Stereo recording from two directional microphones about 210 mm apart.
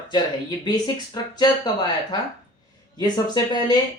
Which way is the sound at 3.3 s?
20° left (ahead or behind).